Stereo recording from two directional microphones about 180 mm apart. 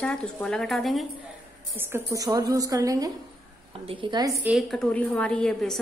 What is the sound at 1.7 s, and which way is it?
A woman's voice, 15° right (ahead or behind).